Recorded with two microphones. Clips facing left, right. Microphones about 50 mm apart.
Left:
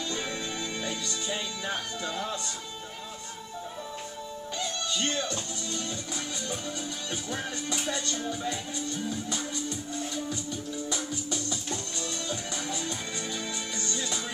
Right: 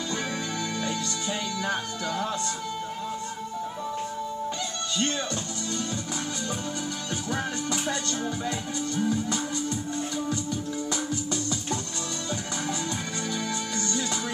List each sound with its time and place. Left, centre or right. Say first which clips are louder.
1.6 s music: right 4 dB; right
7.3 s music: right 5 dB; right
13.3 s music: right 5 dB; right